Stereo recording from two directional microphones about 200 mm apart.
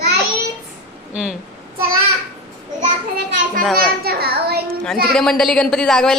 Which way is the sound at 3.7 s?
50° right (ahead or behind).